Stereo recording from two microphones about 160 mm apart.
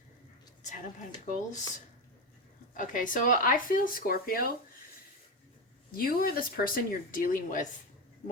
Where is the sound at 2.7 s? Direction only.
55° left (ahead or behind).